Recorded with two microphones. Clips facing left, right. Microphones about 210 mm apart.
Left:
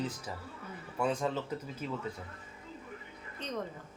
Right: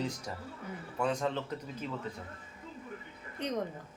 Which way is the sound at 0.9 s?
5° left (ahead or behind).